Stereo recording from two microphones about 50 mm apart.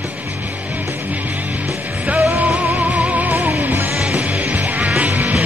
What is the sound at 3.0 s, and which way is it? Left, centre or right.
Music, right.